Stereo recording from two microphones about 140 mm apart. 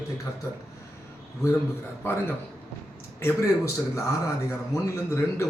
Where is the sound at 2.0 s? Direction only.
15° left (ahead or behind).